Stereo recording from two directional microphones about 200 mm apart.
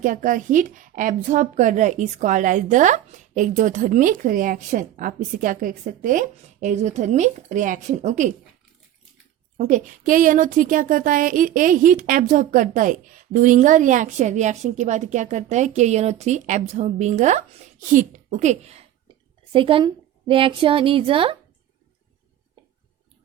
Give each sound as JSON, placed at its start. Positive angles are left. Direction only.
{"t": 0.0, "sound": "a woman's voice", "side_deg": -40}
{"t": 9.6, "sound": "a woman's voice", "side_deg": -40}